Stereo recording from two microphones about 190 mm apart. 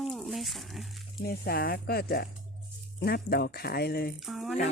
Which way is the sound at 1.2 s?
55° left (ahead or behind).